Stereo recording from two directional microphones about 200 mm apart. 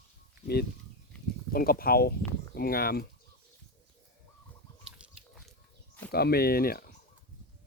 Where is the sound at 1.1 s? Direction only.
5° left (ahead or behind).